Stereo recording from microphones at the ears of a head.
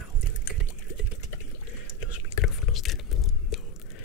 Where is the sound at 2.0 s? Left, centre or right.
Left.